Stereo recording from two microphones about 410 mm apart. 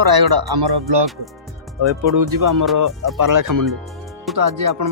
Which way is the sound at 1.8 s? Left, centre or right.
Right.